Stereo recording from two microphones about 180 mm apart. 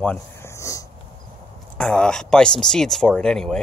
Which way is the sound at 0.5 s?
15° left (ahead or behind).